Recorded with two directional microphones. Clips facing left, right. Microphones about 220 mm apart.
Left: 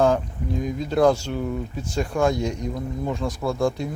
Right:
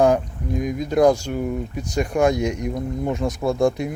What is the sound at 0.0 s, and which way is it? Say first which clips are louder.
Speech: right 3 dB; 15° right (ahead or behind).